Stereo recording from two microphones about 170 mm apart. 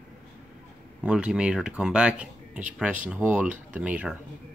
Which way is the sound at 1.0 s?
5° right (ahead or behind).